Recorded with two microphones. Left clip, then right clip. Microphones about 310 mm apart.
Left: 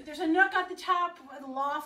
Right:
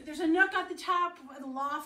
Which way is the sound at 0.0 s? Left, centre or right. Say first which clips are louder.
Left 1 dB; left.